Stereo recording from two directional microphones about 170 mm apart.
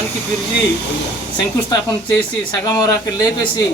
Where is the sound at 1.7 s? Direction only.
20° left (ahead or behind).